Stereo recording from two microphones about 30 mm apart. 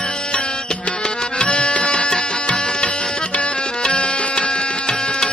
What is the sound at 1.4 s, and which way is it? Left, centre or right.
Music, left.